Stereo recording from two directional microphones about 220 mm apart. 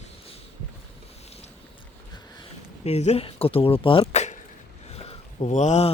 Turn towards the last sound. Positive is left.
turn(degrees=30)  # may be behind; listen again after turning